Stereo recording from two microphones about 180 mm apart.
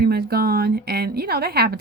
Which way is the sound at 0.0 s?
60° right (ahead or behind).